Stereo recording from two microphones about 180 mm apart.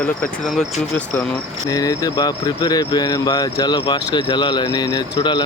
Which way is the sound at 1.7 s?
20° left (ahead or behind).